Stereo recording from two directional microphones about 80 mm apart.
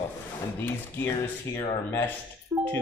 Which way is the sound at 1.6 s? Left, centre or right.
Left.